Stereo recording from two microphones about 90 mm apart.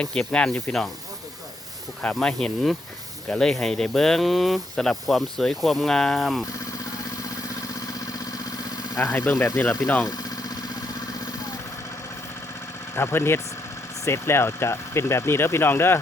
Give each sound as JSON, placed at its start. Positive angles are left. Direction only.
{"t": 0.0, "sound": "speech", "side_deg": 10}
{"t": 2.1, "sound": "speech", "side_deg": 5}
{"t": 7.3, "sound": "vehicle", "side_deg": 40}
{"t": 9.0, "sound": "speech", "side_deg": 20}
{"t": 9.3, "sound": "speech", "side_deg": 40}
{"t": 10.1, "sound": "engine", "side_deg": 40}
{"t": 13.0, "sound": "speech", "side_deg": 25}